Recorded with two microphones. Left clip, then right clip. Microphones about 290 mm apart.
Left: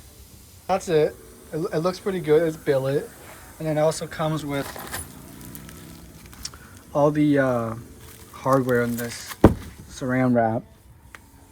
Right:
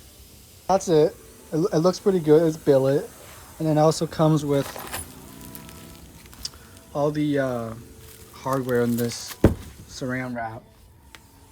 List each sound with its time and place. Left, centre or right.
0.7 s speech: centre
6.9 s speech: centre
9.4 s door: centre